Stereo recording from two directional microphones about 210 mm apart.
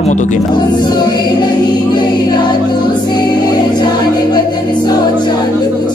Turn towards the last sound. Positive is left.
turn(degrees=20)  # may be behind; listen again after turning